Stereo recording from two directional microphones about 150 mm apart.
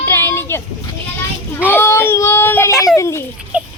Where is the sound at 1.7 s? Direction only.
15° left (ahead or behind).